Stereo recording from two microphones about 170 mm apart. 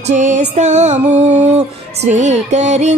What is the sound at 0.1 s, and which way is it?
Music, 45° right (ahead or behind).